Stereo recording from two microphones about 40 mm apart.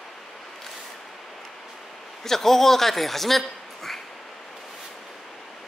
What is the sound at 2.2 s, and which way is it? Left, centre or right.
A man's voice, centre.